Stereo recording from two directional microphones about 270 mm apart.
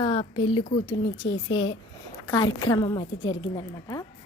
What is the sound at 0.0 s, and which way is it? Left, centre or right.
A woman's voice, centre.